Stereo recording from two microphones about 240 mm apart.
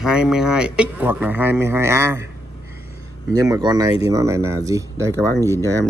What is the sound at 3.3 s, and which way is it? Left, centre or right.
A man's voice, centre.